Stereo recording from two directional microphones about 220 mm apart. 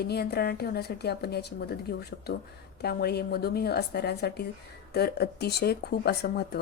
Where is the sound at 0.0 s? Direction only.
45° left (ahead or behind).